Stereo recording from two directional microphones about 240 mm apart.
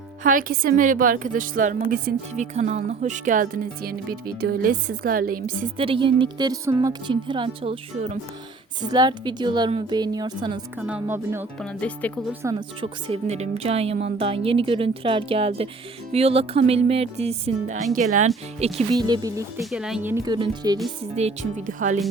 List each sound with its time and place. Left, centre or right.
0.2 s a woman's voice: right
5.7 s speech: right
10.8 s speech: centre
11.6 s speech: centre
12.3 s speech: centre; by 22.0 s right